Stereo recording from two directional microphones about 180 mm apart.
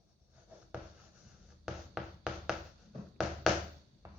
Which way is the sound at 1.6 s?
5° right (ahead or behind).